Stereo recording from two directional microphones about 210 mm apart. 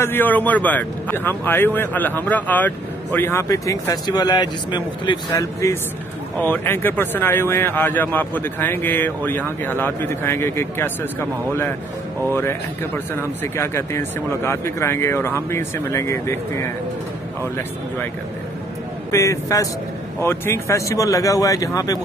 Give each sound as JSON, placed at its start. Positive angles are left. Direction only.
{"t": 0.0, "sound": "a man's voice", "side_deg": 10}
{"t": 12.3, "sound": "a man's voice", "side_deg": 10}
{"t": 19.1, "sound": "a man's voice", "side_deg": 15}